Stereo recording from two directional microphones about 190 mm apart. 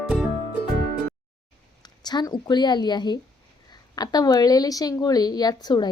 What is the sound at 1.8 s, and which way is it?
Speech, 20° left (ahead or behind).